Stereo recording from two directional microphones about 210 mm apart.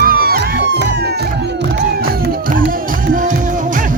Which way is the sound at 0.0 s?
45° right (ahead or behind).